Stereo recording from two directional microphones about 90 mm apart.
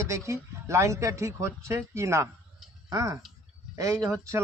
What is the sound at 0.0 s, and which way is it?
Speech, 35° right (ahead or behind).